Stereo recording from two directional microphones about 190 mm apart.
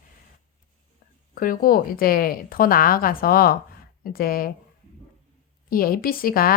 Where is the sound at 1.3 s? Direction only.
50° left (ahead or behind).